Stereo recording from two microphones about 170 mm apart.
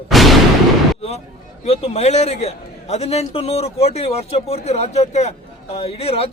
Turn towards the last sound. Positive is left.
turn(degrees=35)  # may be behind; listen again after turning